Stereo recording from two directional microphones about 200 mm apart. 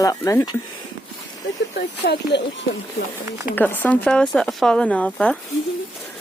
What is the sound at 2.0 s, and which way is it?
Speech, 55° left (ahead or behind).